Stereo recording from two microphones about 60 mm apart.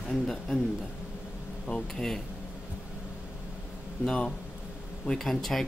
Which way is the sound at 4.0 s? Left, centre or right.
Centre.